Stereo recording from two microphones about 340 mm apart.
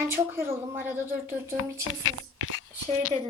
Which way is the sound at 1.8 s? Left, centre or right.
Left.